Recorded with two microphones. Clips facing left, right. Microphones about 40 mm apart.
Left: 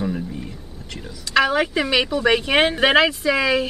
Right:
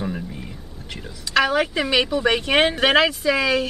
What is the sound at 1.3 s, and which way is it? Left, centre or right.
Speech, centre.